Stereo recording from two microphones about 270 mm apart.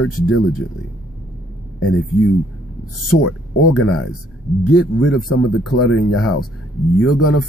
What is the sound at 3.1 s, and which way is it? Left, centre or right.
Speech, left.